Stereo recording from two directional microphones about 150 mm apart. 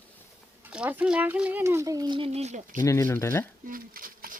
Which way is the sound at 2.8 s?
20° left (ahead or behind).